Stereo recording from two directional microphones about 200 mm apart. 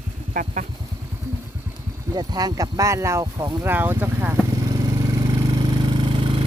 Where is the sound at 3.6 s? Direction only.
10° right (ahead or behind).